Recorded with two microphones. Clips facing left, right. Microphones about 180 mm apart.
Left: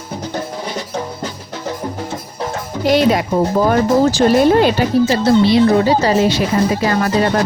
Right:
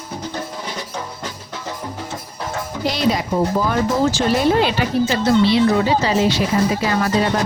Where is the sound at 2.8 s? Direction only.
55° left (ahead or behind).